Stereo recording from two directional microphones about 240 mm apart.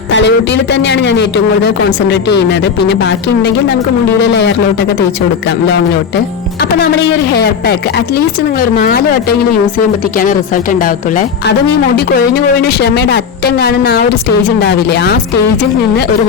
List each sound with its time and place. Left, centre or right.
0.1 s speech: left
7.3 s speech: left